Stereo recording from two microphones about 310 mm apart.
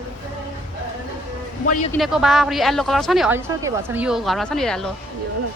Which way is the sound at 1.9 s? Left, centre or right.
Centre.